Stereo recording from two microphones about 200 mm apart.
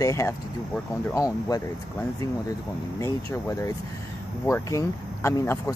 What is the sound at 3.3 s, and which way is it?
Speech, 15° left (ahead or behind).